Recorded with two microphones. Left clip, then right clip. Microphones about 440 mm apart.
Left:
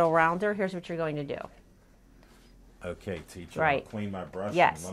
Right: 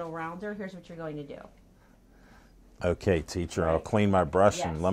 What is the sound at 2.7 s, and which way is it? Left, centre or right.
Speech, right.